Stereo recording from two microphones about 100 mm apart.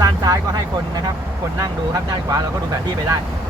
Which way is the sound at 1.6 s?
35° right (ahead or behind).